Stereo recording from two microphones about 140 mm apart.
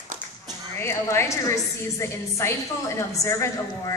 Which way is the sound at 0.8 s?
20° left (ahead or behind).